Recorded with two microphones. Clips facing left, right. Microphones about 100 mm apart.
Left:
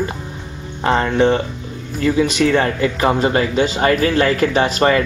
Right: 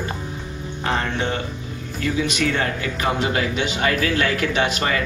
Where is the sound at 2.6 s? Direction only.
35° left (ahead or behind).